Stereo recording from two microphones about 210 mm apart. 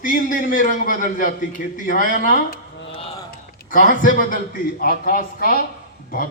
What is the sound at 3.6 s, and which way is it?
A man's voice, 40° left (ahead or behind).